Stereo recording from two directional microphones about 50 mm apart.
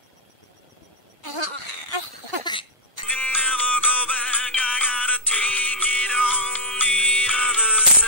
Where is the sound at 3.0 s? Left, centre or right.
Left.